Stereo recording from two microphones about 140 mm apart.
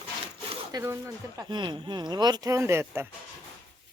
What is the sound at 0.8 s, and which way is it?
Speech, 20° right (ahead or behind).